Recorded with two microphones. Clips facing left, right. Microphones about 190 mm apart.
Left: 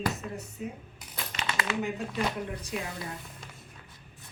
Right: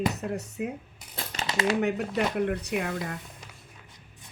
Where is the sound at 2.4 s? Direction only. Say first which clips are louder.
Right 8 dB; 65° right (ahead or behind).